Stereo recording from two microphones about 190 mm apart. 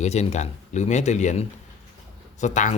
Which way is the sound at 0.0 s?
35° left (ahead or behind).